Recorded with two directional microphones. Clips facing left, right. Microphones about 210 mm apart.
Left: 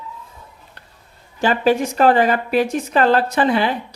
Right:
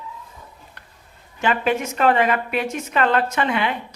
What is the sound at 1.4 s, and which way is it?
A woman's voice, 35° left (ahead or behind).